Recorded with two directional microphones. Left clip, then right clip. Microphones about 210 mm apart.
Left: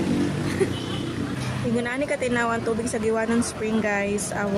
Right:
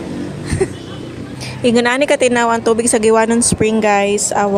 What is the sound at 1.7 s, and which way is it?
A woman's voice, 45° right (ahead or behind).